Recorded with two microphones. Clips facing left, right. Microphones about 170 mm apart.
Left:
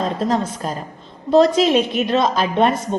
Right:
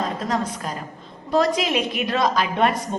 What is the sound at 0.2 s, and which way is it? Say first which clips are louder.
A woman's voice: left 5 dB; 30° left (ahead or behind).